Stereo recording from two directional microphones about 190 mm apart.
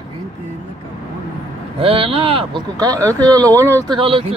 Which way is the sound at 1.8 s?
30° right (ahead or behind).